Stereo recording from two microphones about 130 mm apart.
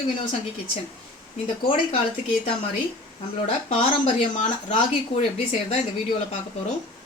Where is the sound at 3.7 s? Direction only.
55° left (ahead or behind).